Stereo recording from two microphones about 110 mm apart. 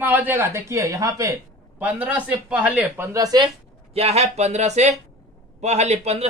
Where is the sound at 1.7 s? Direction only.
15° right (ahead or behind).